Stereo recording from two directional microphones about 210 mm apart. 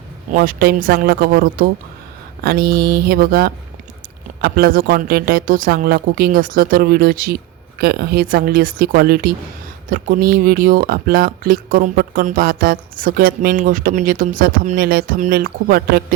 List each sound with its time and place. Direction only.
0.3 s speech: 45° right (ahead or behind)